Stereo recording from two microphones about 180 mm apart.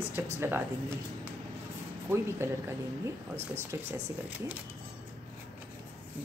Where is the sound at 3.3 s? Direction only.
15° right (ahead or behind).